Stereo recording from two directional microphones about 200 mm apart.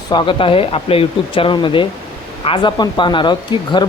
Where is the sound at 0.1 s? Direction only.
25° left (ahead or behind).